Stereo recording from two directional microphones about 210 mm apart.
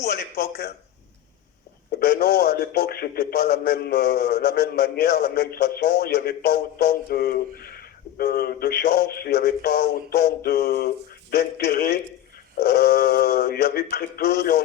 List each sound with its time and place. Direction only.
0.0 s a man's voice: 50° left (ahead or behind)
1.9 s a man's voice: 50° left (ahead or behind)